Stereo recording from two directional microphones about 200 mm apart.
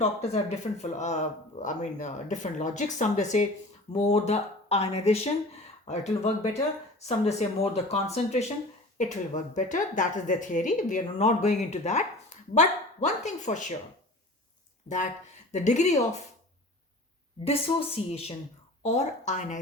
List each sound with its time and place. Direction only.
0.0 s a woman's voice: 35° left (ahead or behind)
7.3 s a woman's voice: 30° left (ahead or behind)
14.8 s a woman's voice: 40° left (ahead or behind)
17.4 s a woman's voice: 30° left (ahead or behind)